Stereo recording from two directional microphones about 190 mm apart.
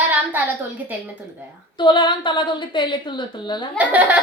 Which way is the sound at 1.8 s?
25° left (ahead or behind).